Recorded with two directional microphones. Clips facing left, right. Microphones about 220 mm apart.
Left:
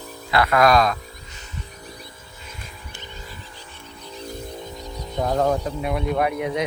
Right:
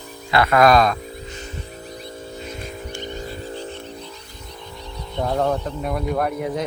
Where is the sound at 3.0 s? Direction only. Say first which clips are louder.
Right 9 dB; 40° right (ahead or behind).